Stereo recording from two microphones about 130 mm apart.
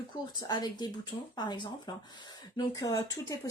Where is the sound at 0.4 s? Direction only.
30° left (ahead or behind).